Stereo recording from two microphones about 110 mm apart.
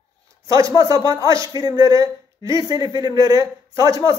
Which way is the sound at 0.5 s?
30° right (ahead or behind).